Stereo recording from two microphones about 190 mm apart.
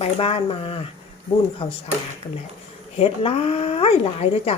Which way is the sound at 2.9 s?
30° left (ahead or behind).